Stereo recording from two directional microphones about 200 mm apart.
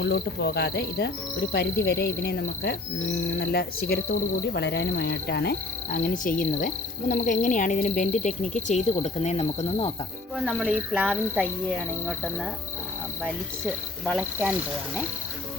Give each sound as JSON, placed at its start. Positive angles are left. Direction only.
{"t": 0.0, "sound": "cricket", "side_deg": 55}
{"t": 3.3, "sound": "speech", "side_deg": 60}
{"t": 5.9, "sound": "cricket", "side_deg": 40}
{"t": 10.3, "sound": "speech", "side_deg": -5}
{"t": 14.0, "sound": "cricket", "side_deg": -5}